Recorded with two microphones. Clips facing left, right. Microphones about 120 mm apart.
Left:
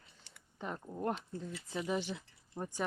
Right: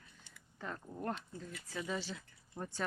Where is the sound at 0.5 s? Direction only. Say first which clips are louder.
Left 3 dB; 20° left (ahead or behind).